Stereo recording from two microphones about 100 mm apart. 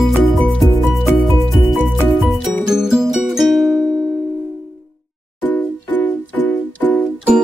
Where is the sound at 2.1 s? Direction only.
Centre (ahead or behind).